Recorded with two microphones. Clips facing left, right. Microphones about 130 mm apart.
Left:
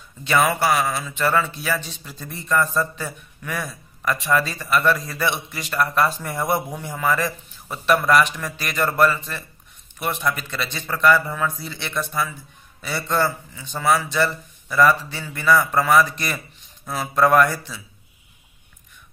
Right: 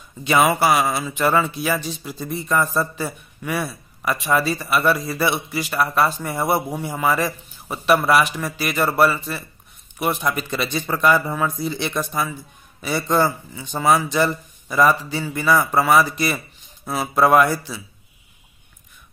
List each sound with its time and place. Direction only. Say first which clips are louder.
0.2 s speech: right 2 dB; 15° right (ahead or behind)